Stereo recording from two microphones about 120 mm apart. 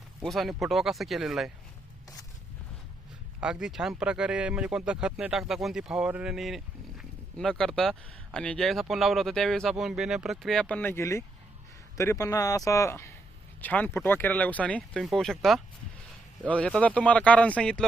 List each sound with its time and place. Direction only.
0.2 s speech: centre (ahead or behind)
3.4 s speech: 5° right (ahead or behind)